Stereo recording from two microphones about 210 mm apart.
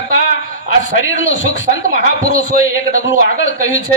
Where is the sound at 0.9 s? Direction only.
65° left (ahead or behind).